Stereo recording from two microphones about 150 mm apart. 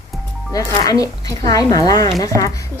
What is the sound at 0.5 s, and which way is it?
Speech, 25° left (ahead or behind).